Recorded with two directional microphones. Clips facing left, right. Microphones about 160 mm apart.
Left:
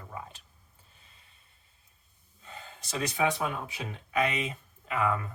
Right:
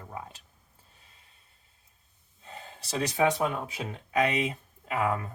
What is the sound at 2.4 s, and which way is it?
Speech, 30° right (ahead or behind).